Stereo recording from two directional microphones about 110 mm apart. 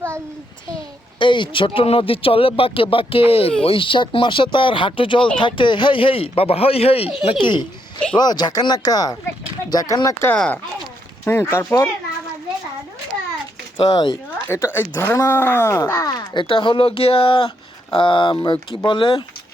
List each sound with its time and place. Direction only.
1.2 s speech: 50° left (ahead or behind); by 7.1 s 65° left (ahead or behind)
7.3 s speech: 50° left (ahead or behind)
8.1 s speech: 40° left (ahead or behind)
10.3 s speech: 5° left (ahead or behind)
11.3 s speech: 25° left (ahead or behind)
13.8 s speech: 50° left (ahead or behind)
14.3 s speech: 20° left (ahead or behind); by 19.2 s 50° left (ahead or behind)